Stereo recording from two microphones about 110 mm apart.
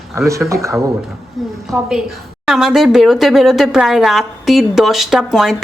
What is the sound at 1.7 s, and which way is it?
A woman's voice, 5° right (ahead or behind).